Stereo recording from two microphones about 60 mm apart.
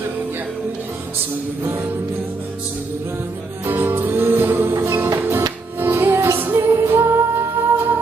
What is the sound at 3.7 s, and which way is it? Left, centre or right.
Music, right.